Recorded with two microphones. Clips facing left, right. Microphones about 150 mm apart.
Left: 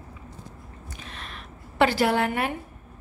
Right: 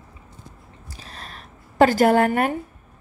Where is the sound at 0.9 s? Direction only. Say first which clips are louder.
Right 1 dB; 35° right (ahead or behind).